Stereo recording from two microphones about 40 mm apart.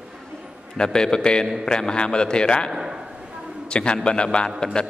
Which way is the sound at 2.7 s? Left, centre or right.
Centre.